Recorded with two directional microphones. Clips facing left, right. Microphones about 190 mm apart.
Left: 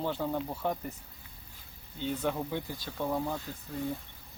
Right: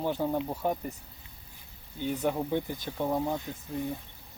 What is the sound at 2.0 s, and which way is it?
Speech, 15° right (ahead or behind).